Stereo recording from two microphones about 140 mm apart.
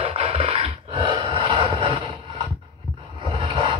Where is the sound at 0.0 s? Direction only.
45° right (ahead or behind).